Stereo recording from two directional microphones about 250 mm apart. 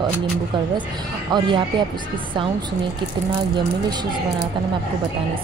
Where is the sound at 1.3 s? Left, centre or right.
Centre.